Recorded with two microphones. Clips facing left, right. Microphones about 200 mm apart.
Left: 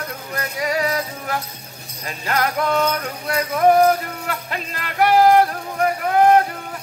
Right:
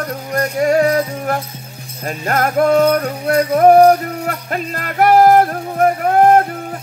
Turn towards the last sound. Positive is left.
turn(degrees=-50)  # may be behind; listen again after turning